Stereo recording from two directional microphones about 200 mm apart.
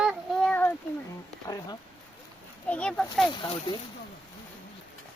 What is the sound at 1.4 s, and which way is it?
Speech, 20° left (ahead or behind).